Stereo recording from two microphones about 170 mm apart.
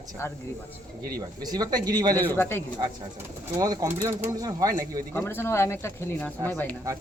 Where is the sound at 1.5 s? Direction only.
25° right (ahead or behind).